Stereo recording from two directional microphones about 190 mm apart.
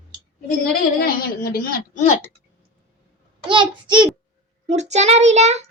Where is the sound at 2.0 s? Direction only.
35° left (ahead or behind).